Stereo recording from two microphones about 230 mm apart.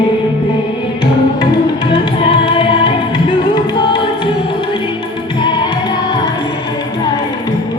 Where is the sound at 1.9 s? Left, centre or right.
Left.